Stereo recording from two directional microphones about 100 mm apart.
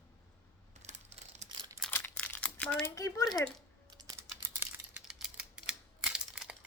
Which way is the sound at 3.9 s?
40° right (ahead or behind).